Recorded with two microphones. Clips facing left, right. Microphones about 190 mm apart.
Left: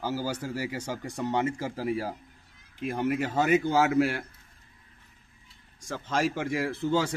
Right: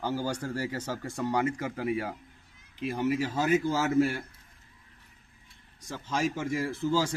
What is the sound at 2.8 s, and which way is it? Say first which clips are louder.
A man's voice: even; 55° left (ahead or behind).